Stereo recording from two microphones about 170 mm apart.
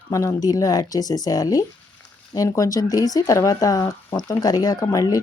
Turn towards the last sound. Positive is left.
turn(degrees=20)  # may be behind; listen again after turning